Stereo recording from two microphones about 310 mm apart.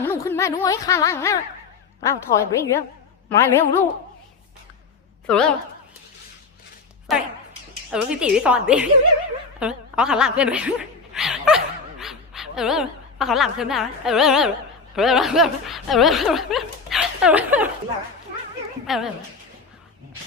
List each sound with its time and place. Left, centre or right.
0.0 s speech: centre
5.2 s a woman's voice: centre
7.1 s speech: centre
18.9 s speech: centre